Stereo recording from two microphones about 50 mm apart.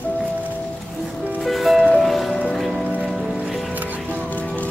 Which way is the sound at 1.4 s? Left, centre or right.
Centre.